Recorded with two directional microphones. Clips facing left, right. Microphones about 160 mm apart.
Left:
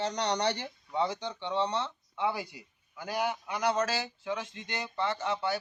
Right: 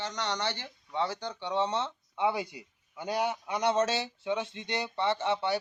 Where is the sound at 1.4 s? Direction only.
10° right (ahead or behind).